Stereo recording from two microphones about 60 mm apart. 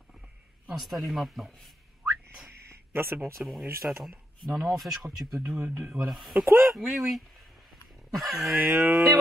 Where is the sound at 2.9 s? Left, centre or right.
Right.